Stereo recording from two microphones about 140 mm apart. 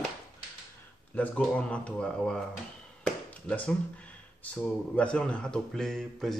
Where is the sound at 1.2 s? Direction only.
10° left (ahead or behind).